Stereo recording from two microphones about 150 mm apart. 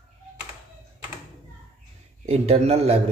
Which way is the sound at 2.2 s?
45° right (ahead or behind).